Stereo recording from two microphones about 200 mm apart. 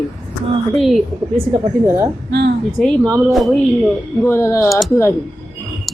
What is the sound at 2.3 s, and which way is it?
Speech, 55° right (ahead or behind).